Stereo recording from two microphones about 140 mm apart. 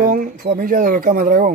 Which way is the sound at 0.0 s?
90° right.